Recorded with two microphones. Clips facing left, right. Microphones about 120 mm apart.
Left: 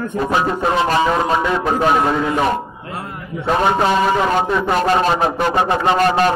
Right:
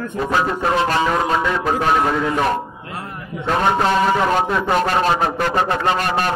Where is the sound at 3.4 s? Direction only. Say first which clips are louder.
Left 2 dB; 10° left (ahead or behind).